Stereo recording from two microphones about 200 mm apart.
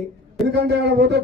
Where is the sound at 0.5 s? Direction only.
55° right (ahead or behind).